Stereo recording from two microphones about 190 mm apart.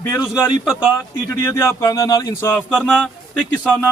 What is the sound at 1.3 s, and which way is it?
Speech, 15° left (ahead or behind).